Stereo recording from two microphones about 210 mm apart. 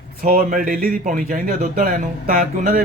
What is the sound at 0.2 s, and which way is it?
Speech, 40° right (ahead or behind).